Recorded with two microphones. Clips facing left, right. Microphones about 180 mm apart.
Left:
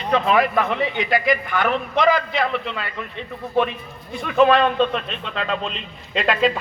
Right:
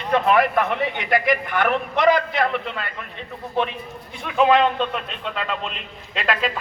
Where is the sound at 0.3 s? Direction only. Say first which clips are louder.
Right 1 dB; 55° right (ahead or behind).